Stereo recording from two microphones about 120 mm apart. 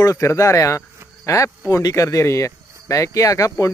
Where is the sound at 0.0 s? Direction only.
25° left (ahead or behind).